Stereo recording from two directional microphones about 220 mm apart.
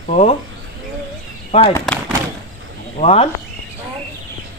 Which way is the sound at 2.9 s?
25° left (ahead or behind).